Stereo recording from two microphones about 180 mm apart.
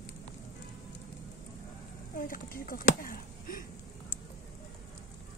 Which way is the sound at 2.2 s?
50° left (ahead or behind).